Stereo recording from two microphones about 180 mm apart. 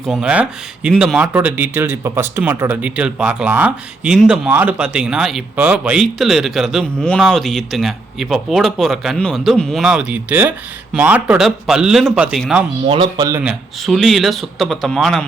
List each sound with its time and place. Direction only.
0.1 s speech: 5° right (ahead or behind)
12.9 s speech: 25° right (ahead or behind)
13.4 s speech: centre (ahead or behind)